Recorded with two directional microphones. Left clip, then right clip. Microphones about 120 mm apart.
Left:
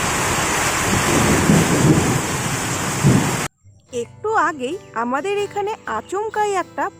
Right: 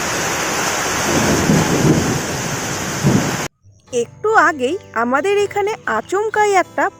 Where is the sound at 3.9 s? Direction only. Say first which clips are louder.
Right 5 dB; 35° right (ahead or behind).